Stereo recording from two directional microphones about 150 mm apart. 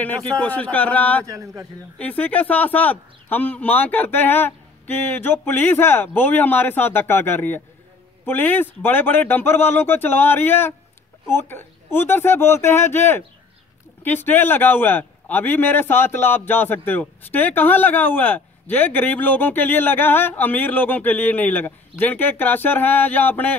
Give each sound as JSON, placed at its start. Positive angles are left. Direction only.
{"t": 0.0, "sound": "a man's voice", "side_deg": 10}
{"t": 1.2, "sound": "a man's voice", "side_deg": -20}
{"t": 2.0, "sound": "a man's voice", "side_deg": 10}